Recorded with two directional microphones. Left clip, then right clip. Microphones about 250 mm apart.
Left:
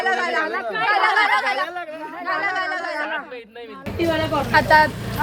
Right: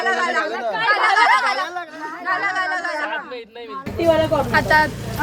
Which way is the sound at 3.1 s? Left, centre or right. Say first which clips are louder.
Right 1 dB; right.